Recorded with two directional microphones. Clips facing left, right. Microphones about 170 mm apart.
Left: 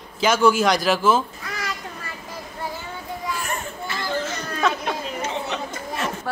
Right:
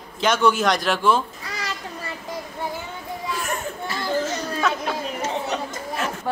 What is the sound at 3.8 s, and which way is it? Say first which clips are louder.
Children playing: right 3 dB; 40° right (ahead or behind).